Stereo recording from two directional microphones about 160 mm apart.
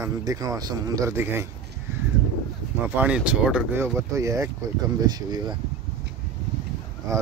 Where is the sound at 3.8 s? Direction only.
20° right (ahead or behind).